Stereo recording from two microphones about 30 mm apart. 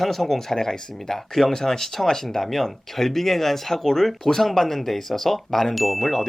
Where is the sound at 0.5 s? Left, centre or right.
Centre.